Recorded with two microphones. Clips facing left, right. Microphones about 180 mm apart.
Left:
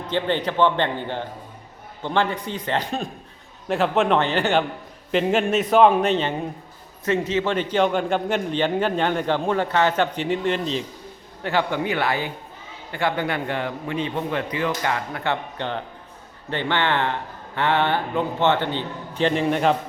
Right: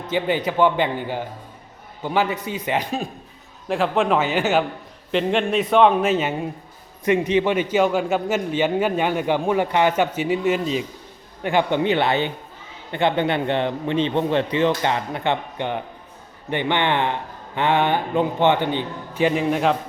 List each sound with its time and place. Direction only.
0.1 s a man's voice: 10° right (ahead or behind)
11.4 s a man's voice: 20° right (ahead or behind); by 19.7 s centre (ahead or behind)